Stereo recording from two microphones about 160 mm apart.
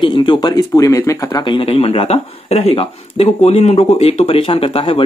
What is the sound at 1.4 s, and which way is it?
Speech, 30° left (ahead or behind).